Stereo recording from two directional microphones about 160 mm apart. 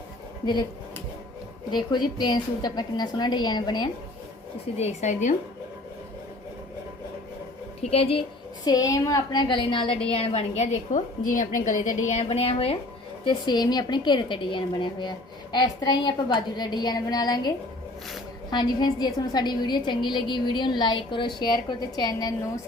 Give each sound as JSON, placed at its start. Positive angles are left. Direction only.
{"t": 1.7, "sound": "a woman's voice", "side_deg": 25}
{"t": 4.8, "sound": "a woman's voice", "side_deg": 45}
{"t": 7.8, "sound": "a woman's voice", "side_deg": 40}
{"t": 8.6, "sound": "a woman's voice", "side_deg": 25}
{"t": 13.2, "sound": "a woman's voice", "side_deg": 25}
{"t": 18.5, "sound": "a woman's voice", "side_deg": 25}